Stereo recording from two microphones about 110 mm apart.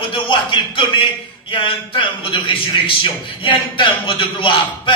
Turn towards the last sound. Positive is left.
turn(degrees=50)  # may be behind; listen again after turning